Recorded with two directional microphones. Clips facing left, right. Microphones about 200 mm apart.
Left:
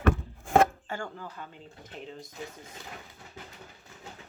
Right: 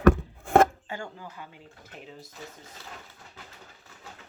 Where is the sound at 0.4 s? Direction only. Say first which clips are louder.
Right 3 dB; 60° right (ahead or behind).